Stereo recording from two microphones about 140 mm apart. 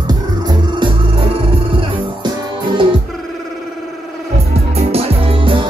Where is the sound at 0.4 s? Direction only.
30° right (ahead or behind).